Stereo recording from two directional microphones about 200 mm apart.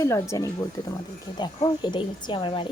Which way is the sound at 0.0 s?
15° left (ahead or behind).